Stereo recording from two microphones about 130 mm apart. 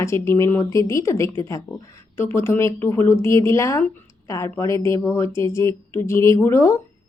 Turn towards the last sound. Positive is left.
turn(degrees=25)  # may be behind; listen again after turning